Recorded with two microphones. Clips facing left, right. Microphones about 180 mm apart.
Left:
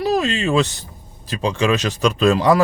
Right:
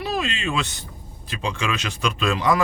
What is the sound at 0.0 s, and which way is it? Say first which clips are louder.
Speech: left 7 dB; 40° left (ahead or behind).